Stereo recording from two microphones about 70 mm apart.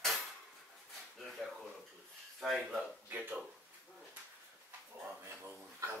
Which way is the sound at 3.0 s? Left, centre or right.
Right.